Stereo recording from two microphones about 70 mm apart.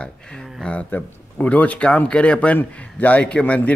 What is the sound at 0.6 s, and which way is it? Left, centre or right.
A man's voice, centre.